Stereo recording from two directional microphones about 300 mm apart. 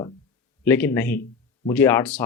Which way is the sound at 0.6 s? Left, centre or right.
Centre.